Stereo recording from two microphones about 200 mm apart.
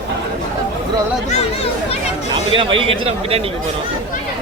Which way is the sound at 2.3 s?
25° right (ahead or behind).